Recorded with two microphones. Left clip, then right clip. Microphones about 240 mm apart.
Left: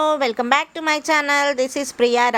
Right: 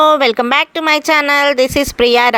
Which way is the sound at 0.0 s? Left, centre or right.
Right.